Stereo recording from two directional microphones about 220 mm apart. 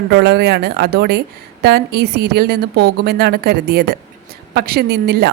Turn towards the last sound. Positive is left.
turn(degrees=-45)  # may be behind; listen again after turning